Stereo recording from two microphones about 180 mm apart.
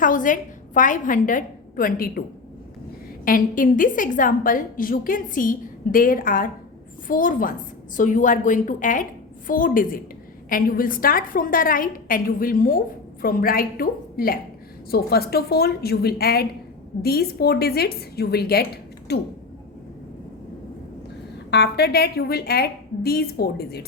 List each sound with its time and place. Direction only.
0.0 s a woman's voice: 45° left (ahead or behind)
3.2 s a woman's voice: 50° left (ahead or behind); by 19.2 s 65° left (ahead or behind)
21.5 s a woman's voice: 65° left (ahead or behind)